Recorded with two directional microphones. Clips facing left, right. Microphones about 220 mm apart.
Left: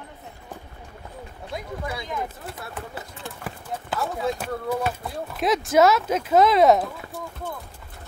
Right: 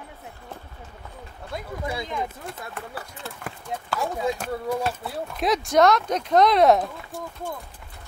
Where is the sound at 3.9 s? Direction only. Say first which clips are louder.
Even; 15° right (ahead or behind).